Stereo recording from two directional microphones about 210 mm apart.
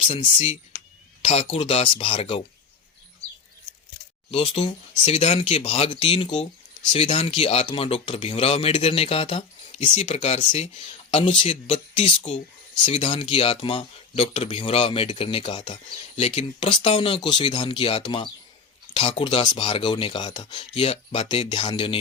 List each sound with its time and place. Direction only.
0.0 s speech: 25° left (ahead or behind)
0.7 s a sound: 50° left (ahead or behind)
1.2 s speech: 30° left (ahead or behind)
4.3 s speech: 30° left (ahead or behind)